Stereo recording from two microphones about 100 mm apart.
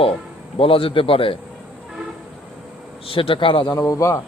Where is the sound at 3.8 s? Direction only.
30° left (ahead or behind).